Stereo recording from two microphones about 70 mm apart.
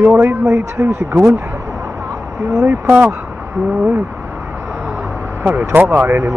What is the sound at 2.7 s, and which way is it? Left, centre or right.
Speech, right.